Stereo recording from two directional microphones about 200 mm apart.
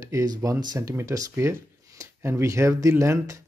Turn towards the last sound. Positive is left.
turn(degrees=-15)  # may be behind; listen again after turning